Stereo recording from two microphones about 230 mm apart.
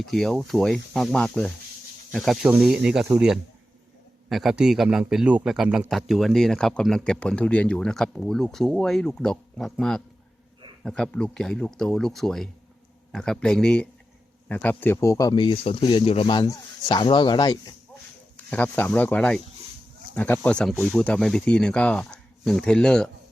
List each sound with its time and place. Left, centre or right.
0.0 s a man's voice: centre
18.5 s a man's voice: centre